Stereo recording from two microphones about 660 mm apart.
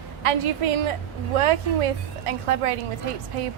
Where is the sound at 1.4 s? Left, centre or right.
Right.